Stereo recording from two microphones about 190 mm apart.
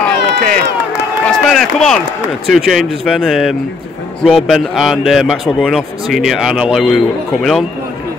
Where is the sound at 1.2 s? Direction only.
Centre (ahead or behind).